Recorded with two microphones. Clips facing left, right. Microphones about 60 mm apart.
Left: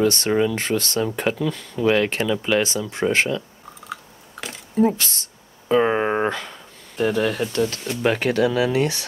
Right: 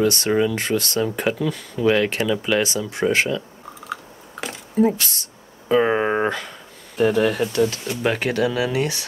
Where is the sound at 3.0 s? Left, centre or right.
Centre.